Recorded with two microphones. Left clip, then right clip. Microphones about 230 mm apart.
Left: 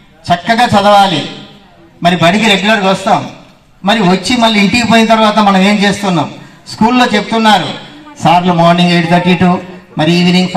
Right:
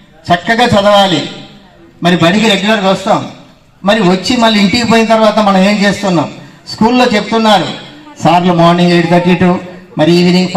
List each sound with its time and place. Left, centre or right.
0.2 s a man's voice: left